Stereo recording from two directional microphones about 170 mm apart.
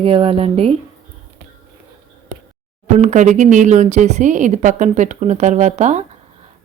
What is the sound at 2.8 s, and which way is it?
A woman's voice, 45° right (ahead or behind).